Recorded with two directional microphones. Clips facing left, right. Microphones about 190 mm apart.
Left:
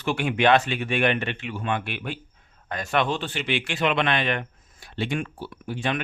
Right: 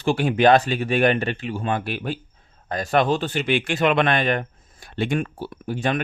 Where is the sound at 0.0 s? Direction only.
35° right (ahead or behind).